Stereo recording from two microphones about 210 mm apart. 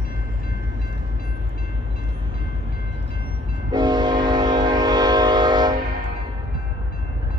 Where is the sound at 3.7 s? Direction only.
20° right (ahead or behind).